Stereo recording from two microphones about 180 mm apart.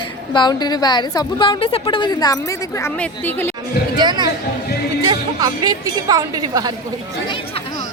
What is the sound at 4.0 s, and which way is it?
A woman's voice, 25° right (ahead or behind).